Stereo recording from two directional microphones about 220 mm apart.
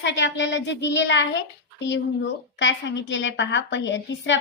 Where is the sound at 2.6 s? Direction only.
55° left (ahead or behind).